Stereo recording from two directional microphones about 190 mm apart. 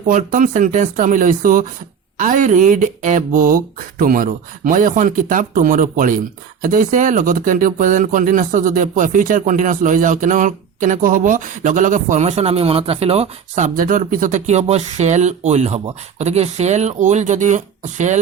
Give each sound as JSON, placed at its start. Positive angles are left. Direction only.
{"t": 0.1, "sound": "speech", "side_deg": -45}
{"t": 13.7, "sound": "speech", "side_deg": -45}